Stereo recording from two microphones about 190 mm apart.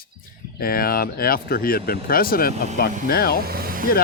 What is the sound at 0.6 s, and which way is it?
Speech, 50° left (ahead or behind).